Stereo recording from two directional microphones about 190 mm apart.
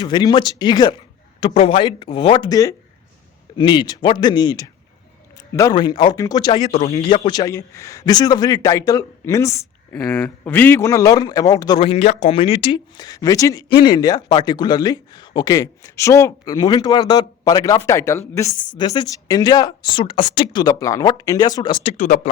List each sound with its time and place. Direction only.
0.0 s a man's voice: 20° left (ahead or behind)
6.7 s speech: 35° left (ahead or behind)
7.2 s a man's voice: 20° left (ahead or behind)
21.9 s speech: 45° left (ahead or behind)